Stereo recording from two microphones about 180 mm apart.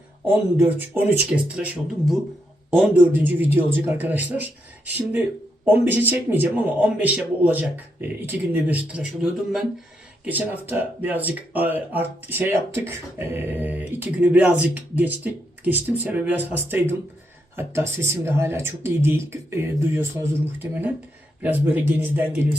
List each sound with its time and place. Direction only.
0.3 s speech: 10° right (ahead or behind)
5.6 s speech: 10° right (ahead or behind)